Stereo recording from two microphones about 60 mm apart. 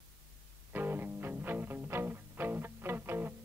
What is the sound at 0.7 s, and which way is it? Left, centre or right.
Music, right.